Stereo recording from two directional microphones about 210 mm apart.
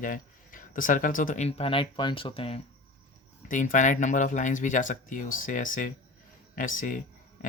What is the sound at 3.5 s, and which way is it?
Speech, 35° left (ahead or behind).